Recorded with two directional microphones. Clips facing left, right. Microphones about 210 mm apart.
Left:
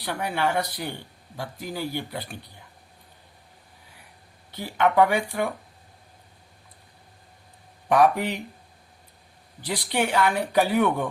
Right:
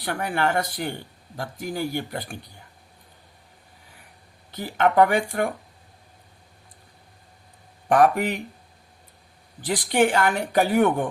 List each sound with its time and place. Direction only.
0.0 s speech: 50° right (ahead or behind)
4.5 s speech: 45° right (ahead or behind)
7.9 s speech: 50° right (ahead or behind)
9.6 s speech: 50° right (ahead or behind)